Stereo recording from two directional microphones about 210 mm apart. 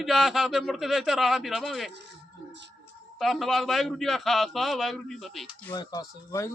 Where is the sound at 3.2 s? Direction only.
Centre (ahead or behind).